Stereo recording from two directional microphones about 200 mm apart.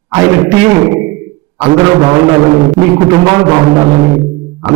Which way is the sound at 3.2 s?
20° right (ahead or behind).